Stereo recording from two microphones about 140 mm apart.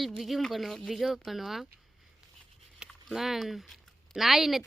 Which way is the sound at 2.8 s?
Centre (ahead or behind).